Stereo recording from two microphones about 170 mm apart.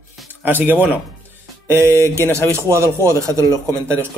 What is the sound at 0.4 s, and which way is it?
Speech, 10° right (ahead or behind).